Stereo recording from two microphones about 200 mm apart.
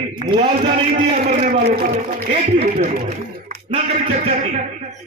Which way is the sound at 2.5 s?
30° right (ahead or behind).